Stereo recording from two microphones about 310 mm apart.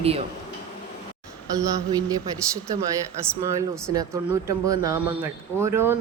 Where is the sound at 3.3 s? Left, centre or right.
Centre.